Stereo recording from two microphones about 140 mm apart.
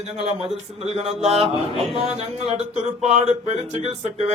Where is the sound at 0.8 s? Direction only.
45° right (ahead or behind).